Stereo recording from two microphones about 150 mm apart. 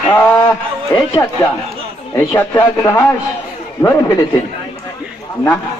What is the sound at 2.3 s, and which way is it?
Speech, 15° left (ahead or behind).